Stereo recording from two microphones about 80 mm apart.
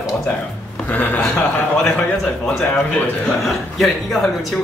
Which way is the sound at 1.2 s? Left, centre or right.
Centre.